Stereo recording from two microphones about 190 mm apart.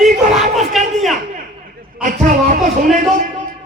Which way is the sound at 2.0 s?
45° right (ahead or behind).